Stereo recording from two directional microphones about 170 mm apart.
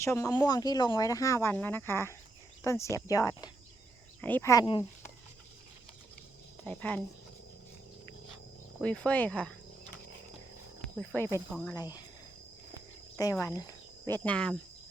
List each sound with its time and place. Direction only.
0.0 s speech: 15° left (ahead or behind)
6.7 s speech: 10° left (ahead or behind)
8.8 s speech: 5° left (ahead or behind)
10.8 s a sound: 5° left (ahead or behind)
11.7 s speech: 20° left (ahead or behind)
13.3 s speech: 20° left (ahead or behind)